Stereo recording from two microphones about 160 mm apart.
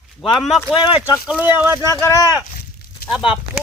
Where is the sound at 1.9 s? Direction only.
25° left (ahead or behind).